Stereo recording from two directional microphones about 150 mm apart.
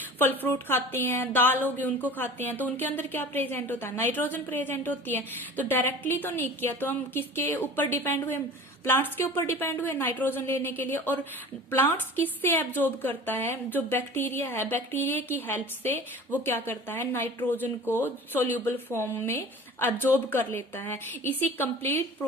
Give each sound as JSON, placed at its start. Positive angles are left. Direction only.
{"t": 0.2, "sound": "a woman's voice", "side_deg": 15}